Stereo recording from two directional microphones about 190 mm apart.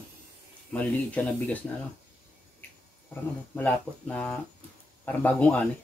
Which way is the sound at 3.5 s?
10° left (ahead or behind).